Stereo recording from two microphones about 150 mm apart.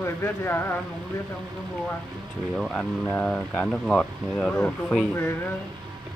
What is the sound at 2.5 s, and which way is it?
Speech, 5° left (ahead or behind).